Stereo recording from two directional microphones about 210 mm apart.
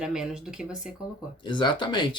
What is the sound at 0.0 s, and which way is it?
Speech, 5° right (ahead or behind).